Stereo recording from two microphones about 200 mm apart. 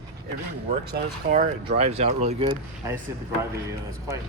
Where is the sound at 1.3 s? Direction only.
35° right (ahead or behind).